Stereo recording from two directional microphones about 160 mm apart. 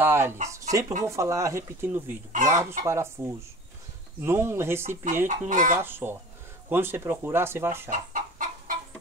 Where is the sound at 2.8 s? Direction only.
15° right (ahead or behind).